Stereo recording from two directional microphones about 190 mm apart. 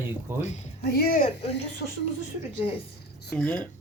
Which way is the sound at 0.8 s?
55° left (ahead or behind).